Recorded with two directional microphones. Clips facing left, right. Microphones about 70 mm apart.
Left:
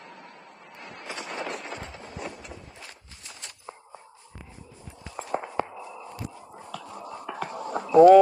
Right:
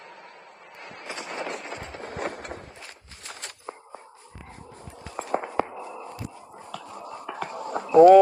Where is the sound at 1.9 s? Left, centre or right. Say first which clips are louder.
Right 5 dB; right.